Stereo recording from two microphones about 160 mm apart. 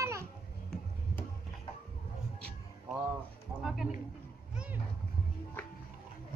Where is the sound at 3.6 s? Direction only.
5° right (ahead or behind).